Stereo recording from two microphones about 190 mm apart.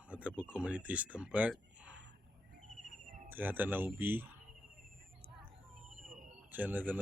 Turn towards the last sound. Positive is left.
turn(degrees=-10)  # may be behind; listen again after turning